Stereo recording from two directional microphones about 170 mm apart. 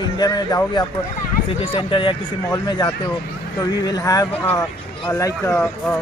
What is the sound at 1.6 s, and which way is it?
Speech, 30° left (ahead or behind).